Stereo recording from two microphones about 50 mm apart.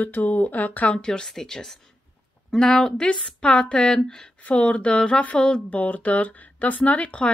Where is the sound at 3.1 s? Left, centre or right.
Left.